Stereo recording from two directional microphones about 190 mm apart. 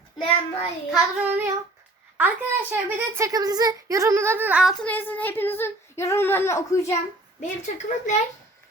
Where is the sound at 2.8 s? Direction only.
10° right (ahead or behind).